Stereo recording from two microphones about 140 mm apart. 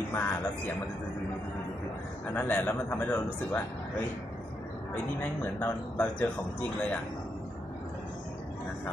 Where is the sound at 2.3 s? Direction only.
15° left (ahead or behind).